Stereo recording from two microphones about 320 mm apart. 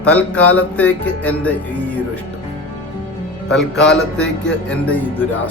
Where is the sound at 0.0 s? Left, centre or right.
Centre.